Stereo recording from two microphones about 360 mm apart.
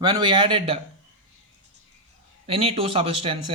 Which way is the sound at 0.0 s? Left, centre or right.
Centre.